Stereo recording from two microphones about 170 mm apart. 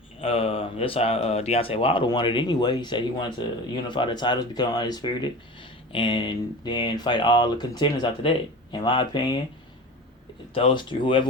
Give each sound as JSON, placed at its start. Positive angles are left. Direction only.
{"t": 0.2, "sound": "speech", "side_deg": 35}
{"t": 10.5, "sound": "speech", "side_deg": 30}